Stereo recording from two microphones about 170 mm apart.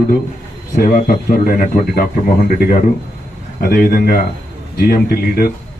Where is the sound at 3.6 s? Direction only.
60° left (ahead or behind).